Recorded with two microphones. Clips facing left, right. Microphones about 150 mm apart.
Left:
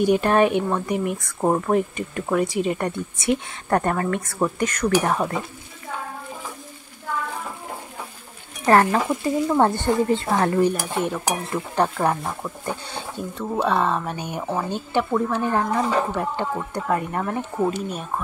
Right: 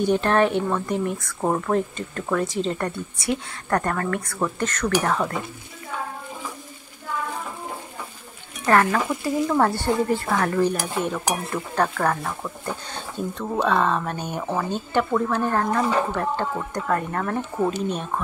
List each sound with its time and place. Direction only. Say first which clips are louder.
0.0 s a woman's voice: left 2 dB; 15° left (ahead or behind)
8.6 s speech: left 2 dB; 25° left (ahead or behind)
10.6 s a woman's voice: left 1 dB; 5° left (ahead or behind)